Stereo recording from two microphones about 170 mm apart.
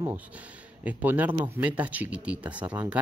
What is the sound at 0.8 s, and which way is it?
Speech, 10° right (ahead or behind).